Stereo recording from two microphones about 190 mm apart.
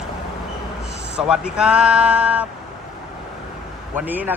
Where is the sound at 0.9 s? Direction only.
65° right (ahead or behind).